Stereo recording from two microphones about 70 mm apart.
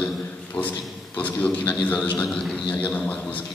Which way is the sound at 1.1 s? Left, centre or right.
Left.